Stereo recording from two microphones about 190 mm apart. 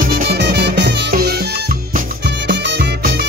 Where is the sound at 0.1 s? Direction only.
60° right (ahead or behind).